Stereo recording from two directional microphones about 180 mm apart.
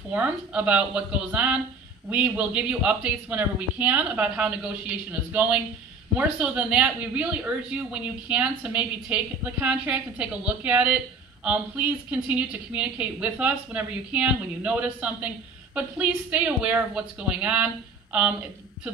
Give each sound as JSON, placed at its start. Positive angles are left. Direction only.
{"t": 0.1, "sound": "speech", "side_deg": -10}